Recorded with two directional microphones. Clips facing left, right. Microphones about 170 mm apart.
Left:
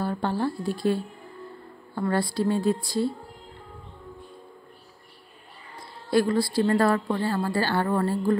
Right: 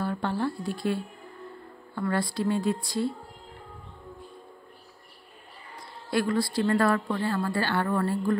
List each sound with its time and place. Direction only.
0.0 s a woman's voice: 35° left (ahead or behind)
2.0 s a woman's voice: 30° left (ahead or behind)
6.0 s a woman's voice: 30° left (ahead or behind)